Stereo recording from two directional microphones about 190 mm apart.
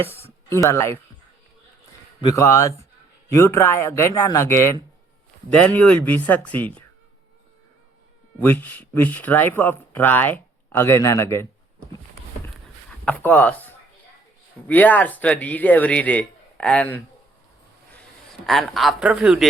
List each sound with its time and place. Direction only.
0.0 s speech: 10° left (ahead or behind)
2.2 s speech: 15° left (ahead or behind)
8.4 s speech: 10° left (ahead or behind)
13.1 s speech: 10° left (ahead or behind)
18.4 s speech: centre (ahead or behind)